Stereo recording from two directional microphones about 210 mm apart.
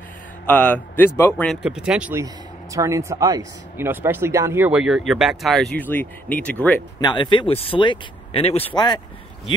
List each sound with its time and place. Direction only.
0.5 s speech: 5° left (ahead or behind)
1.5 s speech: 5° right (ahead or behind)
7.0 s speech: 20° left (ahead or behind)